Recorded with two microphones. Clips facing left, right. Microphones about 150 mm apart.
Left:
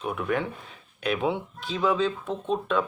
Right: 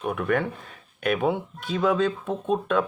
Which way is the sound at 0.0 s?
55° right (ahead or behind).